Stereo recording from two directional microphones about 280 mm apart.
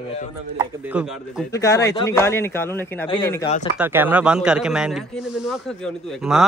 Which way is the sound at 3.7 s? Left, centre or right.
Centre.